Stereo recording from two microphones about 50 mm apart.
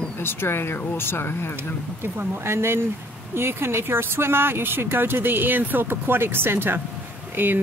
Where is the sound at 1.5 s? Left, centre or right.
Right.